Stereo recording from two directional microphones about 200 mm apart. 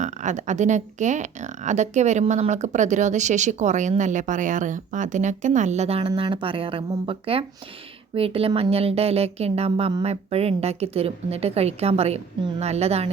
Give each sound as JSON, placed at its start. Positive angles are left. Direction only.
{"t": 0.0, "sound": "speech", "side_deg": -35}